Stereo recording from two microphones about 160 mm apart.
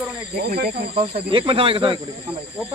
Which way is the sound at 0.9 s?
35° right (ahead or behind).